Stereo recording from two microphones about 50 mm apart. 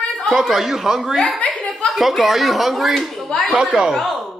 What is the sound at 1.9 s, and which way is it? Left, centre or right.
Speech, centre.